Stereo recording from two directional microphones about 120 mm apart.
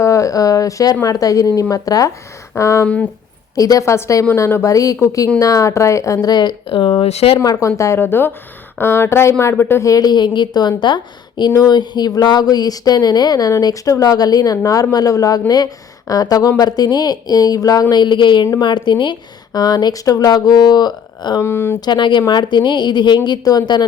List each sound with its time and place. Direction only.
0.0 s a woman's voice: 25° left (ahead or behind)
2.8 s speech: 10° left (ahead or behind)
3.5 s a woman's voice: 30° left (ahead or behind)
6.2 s speech: 35° left (ahead or behind); by 7.3 s 55° left (ahead or behind)
7.3 s a woman's voice: 30° left (ahead or behind)
21.4 s a woman's voice: 20° left (ahead or behind)
21.8 s a woman's voice: 40° left (ahead or behind)